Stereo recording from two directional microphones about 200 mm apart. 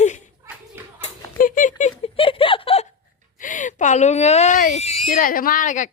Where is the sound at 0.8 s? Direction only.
10° right (ahead or behind).